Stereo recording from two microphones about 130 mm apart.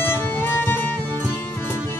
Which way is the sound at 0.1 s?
15° left (ahead or behind).